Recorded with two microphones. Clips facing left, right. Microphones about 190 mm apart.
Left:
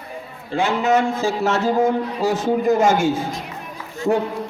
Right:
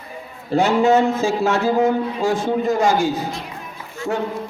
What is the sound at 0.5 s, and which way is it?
Speech, 35° right (ahead or behind).